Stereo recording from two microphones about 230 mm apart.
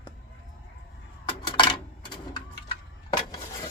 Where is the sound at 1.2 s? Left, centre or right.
Centre.